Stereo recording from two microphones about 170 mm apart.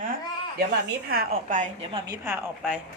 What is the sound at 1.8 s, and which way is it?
Speech, 20° right (ahead or behind).